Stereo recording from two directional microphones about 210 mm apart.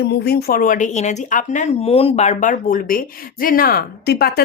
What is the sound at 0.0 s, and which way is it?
Speech, 50° left (ahead or behind).